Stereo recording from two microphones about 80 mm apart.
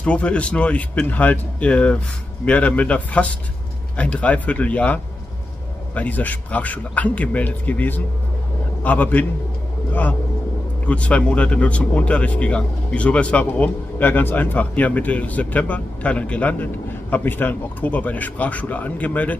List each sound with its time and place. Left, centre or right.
0.0 s speech: centre